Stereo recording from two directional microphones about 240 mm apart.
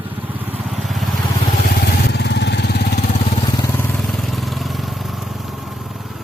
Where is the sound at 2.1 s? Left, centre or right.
Left.